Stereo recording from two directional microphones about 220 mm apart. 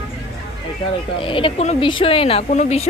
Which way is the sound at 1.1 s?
25° left (ahead or behind).